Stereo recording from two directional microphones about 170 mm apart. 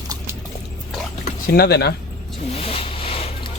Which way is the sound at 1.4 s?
70° left (ahead or behind).